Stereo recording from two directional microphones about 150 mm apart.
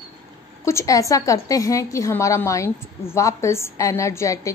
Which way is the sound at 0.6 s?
20° left (ahead or behind).